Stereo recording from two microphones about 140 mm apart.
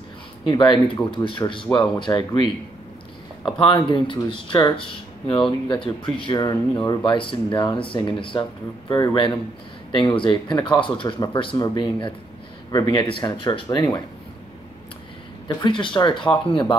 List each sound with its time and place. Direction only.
0.5 s speech: 35° left (ahead or behind)
3.5 s speech: 35° left (ahead or behind)
15.4 s speech: 35° left (ahead or behind)